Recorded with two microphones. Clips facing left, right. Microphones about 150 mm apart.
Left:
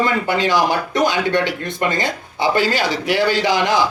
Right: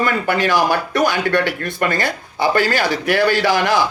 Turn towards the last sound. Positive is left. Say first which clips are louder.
# right 1 dB
turn(degrees=20)  # may be behind; listen again after turning